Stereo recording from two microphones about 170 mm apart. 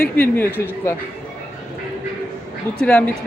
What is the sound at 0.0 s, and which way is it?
Speech, 10° left (ahead or behind).